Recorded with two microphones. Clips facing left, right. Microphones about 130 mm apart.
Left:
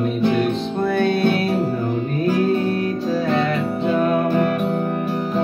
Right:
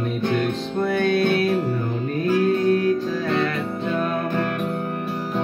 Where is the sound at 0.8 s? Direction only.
30° left (ahead or behind).